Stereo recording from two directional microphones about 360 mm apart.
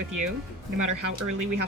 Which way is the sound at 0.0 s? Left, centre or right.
Right.